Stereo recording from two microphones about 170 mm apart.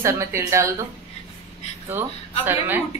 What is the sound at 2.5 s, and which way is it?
Speech, 10° right (ahead or behind).